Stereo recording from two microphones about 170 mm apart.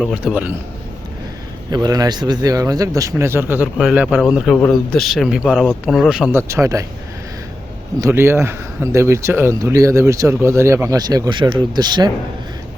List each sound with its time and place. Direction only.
0.0 s speech: 5° right (ahead or behind)
1.7 s speech: 25° right (ahead or behind); by 6.4 s 5° right (ahead or behind)
6.5 s speech: 20° right (ahead or behind)
8.0 s speech: 15° right (ahead or behind)